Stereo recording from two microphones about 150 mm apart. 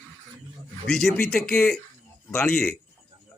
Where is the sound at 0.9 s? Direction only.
5° left (ahead or behind).